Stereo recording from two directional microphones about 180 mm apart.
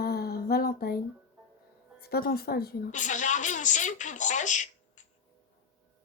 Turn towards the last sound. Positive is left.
turn(degrees=45)  # may be behind; listen again after turning